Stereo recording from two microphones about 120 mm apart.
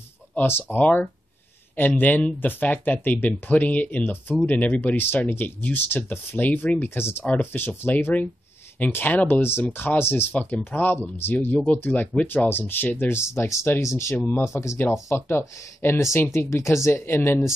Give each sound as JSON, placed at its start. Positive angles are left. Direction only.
{"t": 0.3, "sound": "speech", "side_deg": 15}